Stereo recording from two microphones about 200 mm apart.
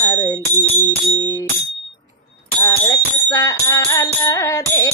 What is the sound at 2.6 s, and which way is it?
Music, 15° left (ahead or behind).